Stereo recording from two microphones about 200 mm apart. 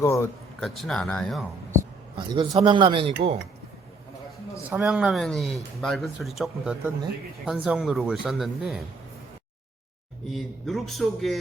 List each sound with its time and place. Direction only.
0.0 s speech: 15° left (ahead or behind)
0.6 s speech: centre (ahead or behind)
2.1 s speech: 20° right (ahead or behind)
4.7 s speech: 5° right (ahead or behind)
10.3 s speech: centre (ahead or behind)